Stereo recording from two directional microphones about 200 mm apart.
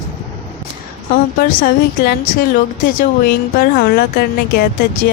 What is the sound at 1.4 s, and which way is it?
Speech, 45° left (ahead or behind).